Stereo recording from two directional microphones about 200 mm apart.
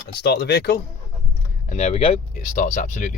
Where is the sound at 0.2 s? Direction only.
55° left (ahead or behind).